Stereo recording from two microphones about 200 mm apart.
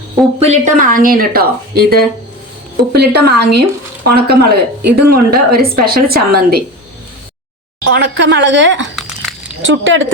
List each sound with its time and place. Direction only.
0.3 s a woman's voice: 35° right (ahead or behind)
7.9 s a woman's voice: 60° right (ahead or behind); by 10.1 s 75° right (ahead or behind)